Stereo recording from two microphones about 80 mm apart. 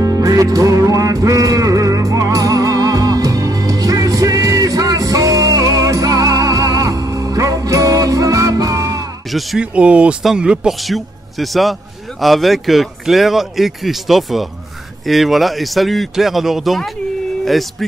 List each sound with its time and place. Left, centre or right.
0.0 s music: right
9.6 s speech: centre
10.8 s speech: centre